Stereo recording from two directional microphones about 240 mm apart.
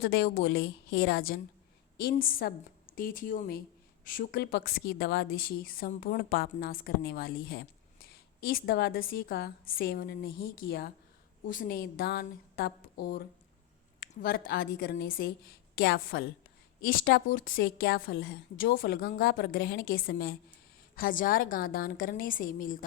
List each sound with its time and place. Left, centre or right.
0.0 s a woman's voice: left